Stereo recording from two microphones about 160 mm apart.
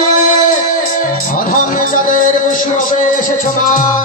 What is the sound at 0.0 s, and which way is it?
Music, 55° left (ahead or behind).